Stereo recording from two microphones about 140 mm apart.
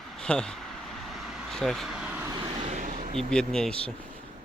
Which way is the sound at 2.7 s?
60° right (ahead or behind).